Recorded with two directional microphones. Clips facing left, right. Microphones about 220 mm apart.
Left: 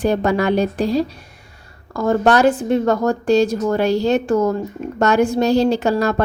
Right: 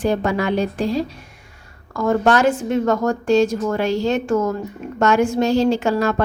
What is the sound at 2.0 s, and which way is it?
A woman's voice, 35° left (ahead or behind).